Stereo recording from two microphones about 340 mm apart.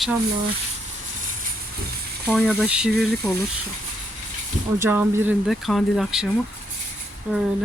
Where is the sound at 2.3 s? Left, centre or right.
Centre.